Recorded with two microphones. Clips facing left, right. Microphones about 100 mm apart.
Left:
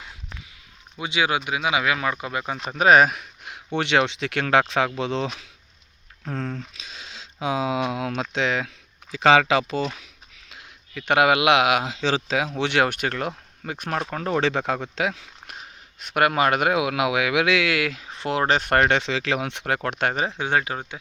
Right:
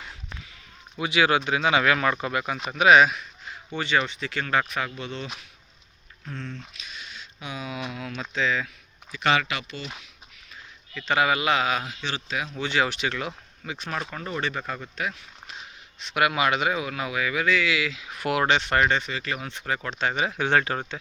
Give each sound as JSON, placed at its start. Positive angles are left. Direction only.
{"t": 0.9, "sound": "speech", "side_deg": 20}
{"t": 2.6, "sound": "speech", "side_deg": 40}
{"t": 7.1, "sound": "speech", "side_deg": 90}
{"t": 10.5, "sound": "speech", "side_deg": 65}
{"t": 15.4, "sound": "speech", "side_deg": 50}
{"t": 18.0, "sound": "speech", "side_deg": 30}
{"t": 20.3, "sound": "speech", "side_deg": 15}